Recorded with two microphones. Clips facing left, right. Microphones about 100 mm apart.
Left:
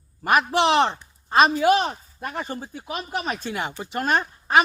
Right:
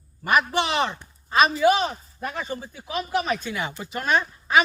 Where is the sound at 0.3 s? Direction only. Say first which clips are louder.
Left 3 dB; 45° left (ahead or behind).